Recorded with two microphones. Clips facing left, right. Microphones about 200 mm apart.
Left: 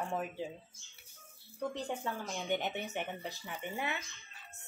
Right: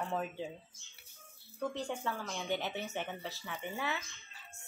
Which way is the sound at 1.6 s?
15° left (ahead or behind).